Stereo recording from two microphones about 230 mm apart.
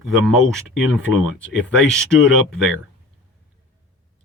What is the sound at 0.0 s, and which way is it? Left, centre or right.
Speech, centre.